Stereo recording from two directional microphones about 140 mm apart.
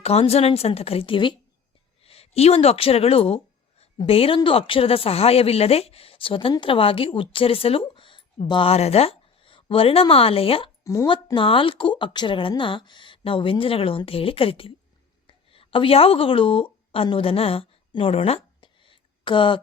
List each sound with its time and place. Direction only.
0.0 s speech: 45° left (ahead or behind)
10.8 s speech: 25° left (ahead or behind)
11.3 s speech: 40° left (ahead or behind)
15.3 s a sound: 40° left (ahead or behind)